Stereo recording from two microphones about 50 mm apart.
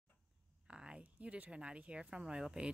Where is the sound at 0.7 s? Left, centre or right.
Centre.